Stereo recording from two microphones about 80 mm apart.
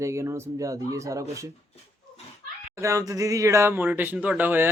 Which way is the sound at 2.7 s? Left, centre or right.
Right.